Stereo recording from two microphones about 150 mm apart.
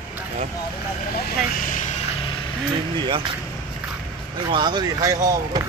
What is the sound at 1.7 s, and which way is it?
Vehicle, 60° left (ahead or behind).